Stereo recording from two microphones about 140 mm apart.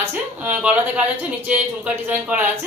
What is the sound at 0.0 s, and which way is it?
Speech, 15° right (ahead or behind).